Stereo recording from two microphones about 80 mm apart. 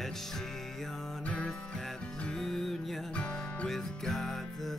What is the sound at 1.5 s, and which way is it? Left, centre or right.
Music, centre.